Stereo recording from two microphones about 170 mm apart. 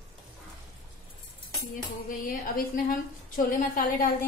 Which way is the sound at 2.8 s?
55° left (ahead or behind).